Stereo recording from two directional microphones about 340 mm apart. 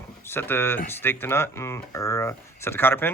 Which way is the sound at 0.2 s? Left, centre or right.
Centre.